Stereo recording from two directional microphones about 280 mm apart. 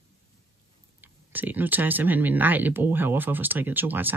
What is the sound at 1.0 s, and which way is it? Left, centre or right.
Speech, centre.